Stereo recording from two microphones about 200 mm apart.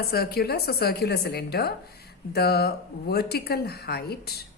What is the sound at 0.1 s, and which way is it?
A woman's voice, 50° left (ahead or behind).